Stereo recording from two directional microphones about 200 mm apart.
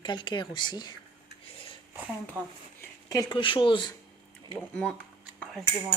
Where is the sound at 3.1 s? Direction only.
20° left (ahead or behind).